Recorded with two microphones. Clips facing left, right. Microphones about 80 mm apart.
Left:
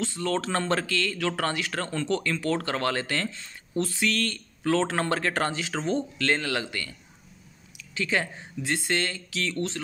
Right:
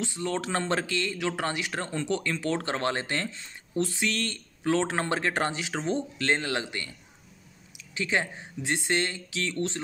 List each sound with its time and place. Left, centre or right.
0.0 s speech: centre